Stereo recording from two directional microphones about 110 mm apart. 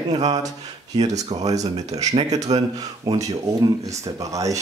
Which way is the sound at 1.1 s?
90° right.